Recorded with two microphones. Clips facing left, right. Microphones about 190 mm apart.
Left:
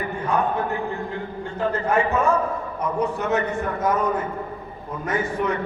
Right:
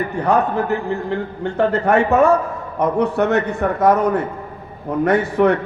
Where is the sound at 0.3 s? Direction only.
75° right (ahead or behind).